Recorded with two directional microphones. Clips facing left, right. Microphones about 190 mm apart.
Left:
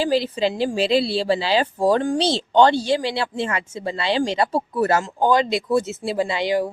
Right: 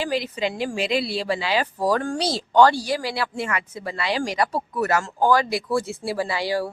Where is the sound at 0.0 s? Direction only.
30° left (ahead or behind).